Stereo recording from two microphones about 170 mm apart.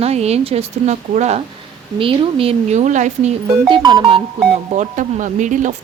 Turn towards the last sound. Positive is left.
turn(degrees=-50)  # may be behind; listen again after turning